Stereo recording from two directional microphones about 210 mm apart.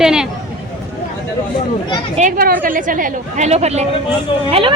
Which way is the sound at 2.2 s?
40° right (ahead or behind).